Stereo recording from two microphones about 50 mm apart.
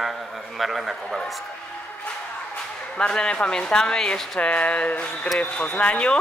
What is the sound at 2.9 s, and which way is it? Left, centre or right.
Speech, centre.